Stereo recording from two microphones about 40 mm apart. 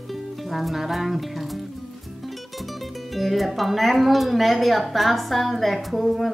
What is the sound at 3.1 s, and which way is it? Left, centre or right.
Speech, centre.